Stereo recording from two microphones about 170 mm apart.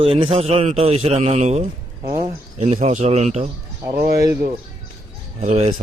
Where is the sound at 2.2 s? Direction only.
35° right (ahead or behind).